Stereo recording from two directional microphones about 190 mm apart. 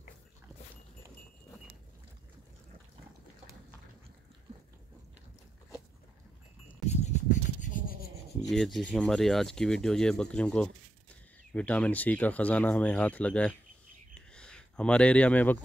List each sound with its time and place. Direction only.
6.9 s a sound: 35° left (ahead or behind)
7.4 s rub: 40° left (ahead or behind)
8.5 s rub: centre (ahead or behind)
8.9 s speech: centre (ahead or behind)